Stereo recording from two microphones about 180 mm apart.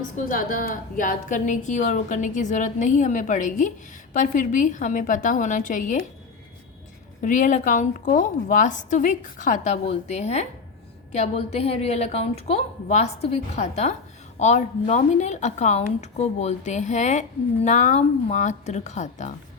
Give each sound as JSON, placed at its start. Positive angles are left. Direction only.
{"t": 0.3, "sound": "a woman's voice", "side_deg": 50}
{"t": 7.2, "sound": "a woman's voice", "side_deg": 45}